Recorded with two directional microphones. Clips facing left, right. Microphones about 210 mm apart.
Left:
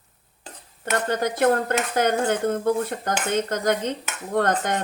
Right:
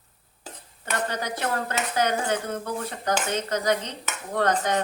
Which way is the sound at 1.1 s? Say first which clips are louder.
Left 8 dB; 50° left (ahead or behind).